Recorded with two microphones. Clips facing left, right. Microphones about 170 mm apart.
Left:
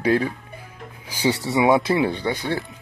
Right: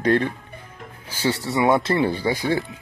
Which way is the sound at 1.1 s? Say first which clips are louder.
Left 2 dB; 15° left (ahead or behind).